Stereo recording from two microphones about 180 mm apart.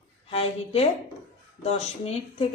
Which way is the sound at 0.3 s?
35° left (ahead or behind).